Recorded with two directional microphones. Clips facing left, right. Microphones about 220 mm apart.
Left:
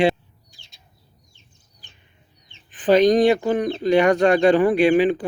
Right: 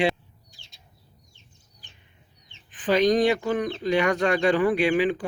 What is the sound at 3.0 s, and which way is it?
Speech, 25° left (ahead or behind).